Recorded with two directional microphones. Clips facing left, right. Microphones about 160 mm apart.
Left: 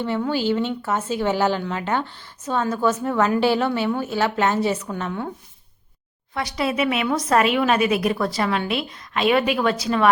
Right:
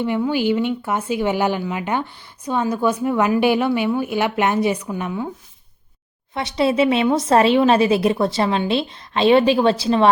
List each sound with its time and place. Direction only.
0.0 s speech: 15° right (ahead or behind)
6.3 s a woman's voice: 25° right (ahead or behind)